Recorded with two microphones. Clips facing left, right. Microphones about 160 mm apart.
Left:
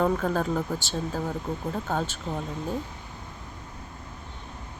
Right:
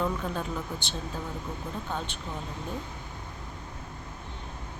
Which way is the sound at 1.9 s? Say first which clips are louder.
Left 6 dB; 40° left (ahead or behind).